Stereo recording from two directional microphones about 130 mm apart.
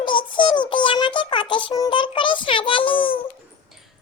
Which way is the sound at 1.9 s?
40° left (ahead or behind).